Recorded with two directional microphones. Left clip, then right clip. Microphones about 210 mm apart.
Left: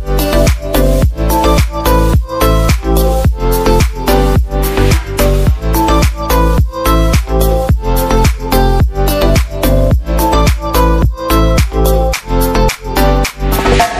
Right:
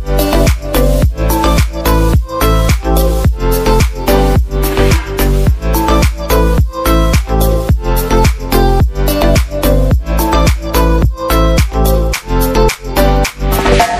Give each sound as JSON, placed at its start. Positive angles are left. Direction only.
{"t": 0.1, "sound": "music", "side_deg": 0}